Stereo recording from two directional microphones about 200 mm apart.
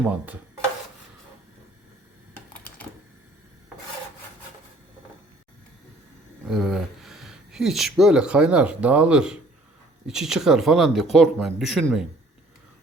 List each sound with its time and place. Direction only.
2.5 s typing: 10° left (ahead or behind)
6.5 s speech: centre (ahead or behind)